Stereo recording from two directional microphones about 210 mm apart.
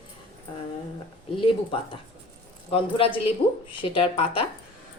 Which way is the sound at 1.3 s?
25° left (ahead or behind).